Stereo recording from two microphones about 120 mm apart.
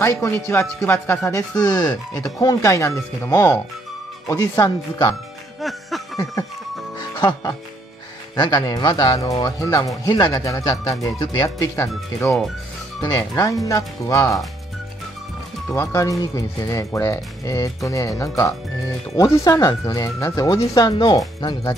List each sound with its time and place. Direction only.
0.2 s speech: 20° left (ahead or behind)
1.6 s speech: 35° left (ahead or behind)
5.6 s music: centre (ahead or behind)
7.2 s speech: 35° left (ahead or behind)
15.7 s speech: 25° left (ahead or behind)